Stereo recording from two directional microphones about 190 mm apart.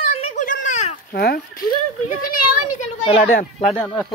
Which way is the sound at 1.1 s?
55° left (ahead or behind).